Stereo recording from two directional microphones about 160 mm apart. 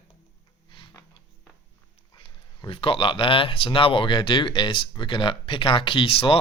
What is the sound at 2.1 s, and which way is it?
Speech, 30° left (ahead or behind).